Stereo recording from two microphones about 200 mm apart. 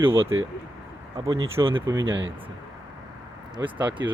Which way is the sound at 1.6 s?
25° right (ahead or behind).